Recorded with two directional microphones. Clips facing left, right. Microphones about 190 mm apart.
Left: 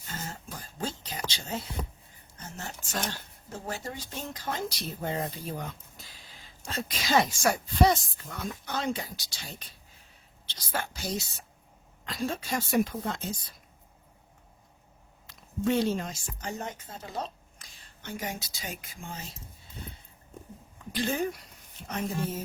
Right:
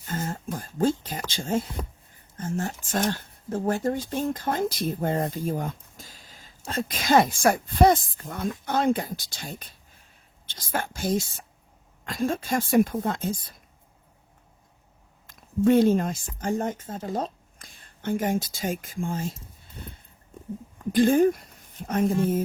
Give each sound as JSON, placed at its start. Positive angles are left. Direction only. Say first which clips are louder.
{"t": 0.0, "sound": "a sound", "louder": "right 9 dB", "side_deg": -50}
{"t": 1.3, "sound": "speech", "louder": "right 9 dB", "side_deg": -50}
{"t": 15.3, "sound": "speech", "louder": "right 8 dB", "side_deg": -50}